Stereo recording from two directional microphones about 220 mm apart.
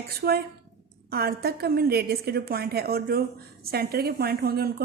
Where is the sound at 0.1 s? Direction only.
45° right (ahead or behind).